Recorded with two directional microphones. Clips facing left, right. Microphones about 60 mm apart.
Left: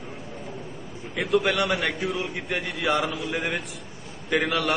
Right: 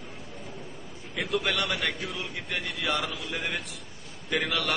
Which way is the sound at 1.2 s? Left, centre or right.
Left.